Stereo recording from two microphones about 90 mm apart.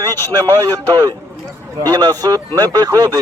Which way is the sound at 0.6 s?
40° right (ahead or behind).